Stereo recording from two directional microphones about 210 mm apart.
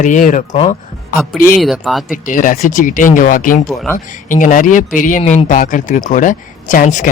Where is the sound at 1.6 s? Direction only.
Centre (ahead or behind).